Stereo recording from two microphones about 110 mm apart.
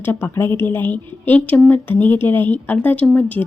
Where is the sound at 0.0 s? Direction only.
20° left (ahead or behind).